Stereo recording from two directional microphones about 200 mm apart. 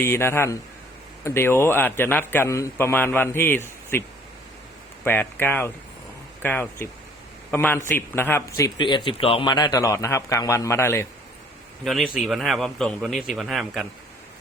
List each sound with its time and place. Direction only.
0.0 s speech: 10° left (ahead or behind)
5.0 s speech: 10° left (ahead or behind)
11.9 s a man's voice: centre (ahead or behind)